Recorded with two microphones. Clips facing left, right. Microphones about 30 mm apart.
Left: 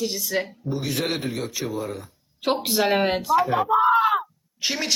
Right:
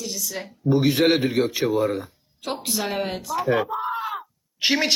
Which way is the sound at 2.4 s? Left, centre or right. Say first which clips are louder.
Left 6 dB; left.